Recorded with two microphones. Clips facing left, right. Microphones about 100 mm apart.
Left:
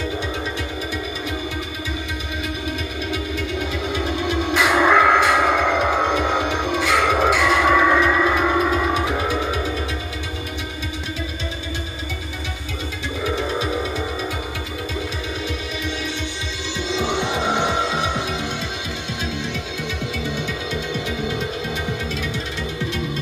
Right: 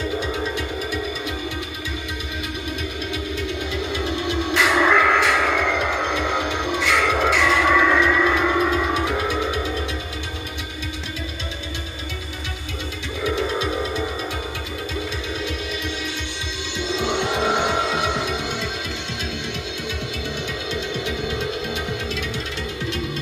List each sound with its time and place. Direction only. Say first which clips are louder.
4.6 s music: left 2 dB; 15° left (ahead or behind)
6.4 s music: left 2 dB; centre (ahead or behind)
6.9 s music: left 2 dB; 15° left (ahead or behind)
17.4 s music: even; centre (ahead or behind)